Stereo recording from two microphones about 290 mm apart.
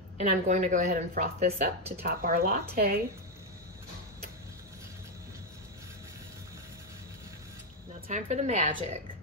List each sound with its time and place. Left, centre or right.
0.2 s speech: right
8.1 s speech: right